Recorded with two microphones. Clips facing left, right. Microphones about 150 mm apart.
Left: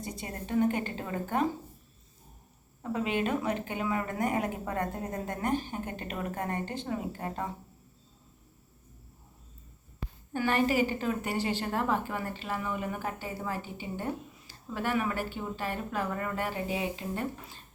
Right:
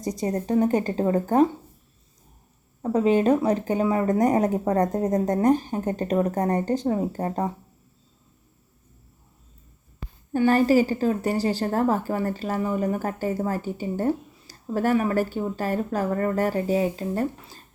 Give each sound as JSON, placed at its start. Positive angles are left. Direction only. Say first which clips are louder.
{"t": 0.0, "sound": "a woman's voice", "louder": "right 12 dB", "side_deg": -40}
{"t": 2.8, "sound": "a woman's voice", "louder": "right 11 dB", "side_deg": -40}
{"t": 10.3, "sound": "a woman's voice", "louder": "right 9 dB", "side_deg": -35}